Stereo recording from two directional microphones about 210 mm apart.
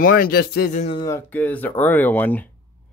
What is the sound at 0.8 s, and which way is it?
Speech, 25° left (ahead or behind).